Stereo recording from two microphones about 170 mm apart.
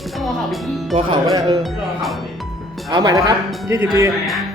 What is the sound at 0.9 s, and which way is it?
Speech, 30° right (ahead or behind).